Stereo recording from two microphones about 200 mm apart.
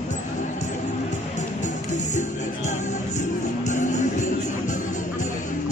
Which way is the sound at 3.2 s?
35° left (ahead or behind).